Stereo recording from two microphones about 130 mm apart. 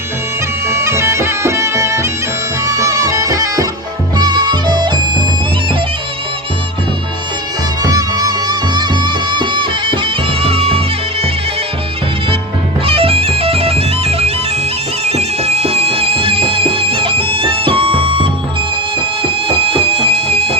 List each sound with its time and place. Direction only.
0.7 s bagpipes: 20° right (ahead or behind)
2.6 s music: 25° right (ahead or behind)
7.8 s music: 30° right (ahead or behind); by 11.3 s 45° right (ahead or behind)
12.8 s bagpipes: 45° right (ahead or behind)
15.0 s music: 50° right (ahead or behind)